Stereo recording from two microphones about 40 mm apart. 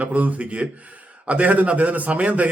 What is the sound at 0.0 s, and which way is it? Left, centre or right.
A man's voice, right.